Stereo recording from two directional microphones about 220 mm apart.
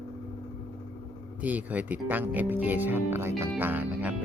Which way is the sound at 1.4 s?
5° right (ahead or behind).